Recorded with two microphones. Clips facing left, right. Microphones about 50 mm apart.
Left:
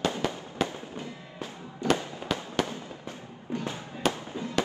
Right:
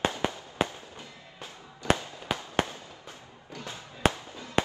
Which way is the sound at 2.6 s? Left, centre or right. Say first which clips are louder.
Right 1 dB; right.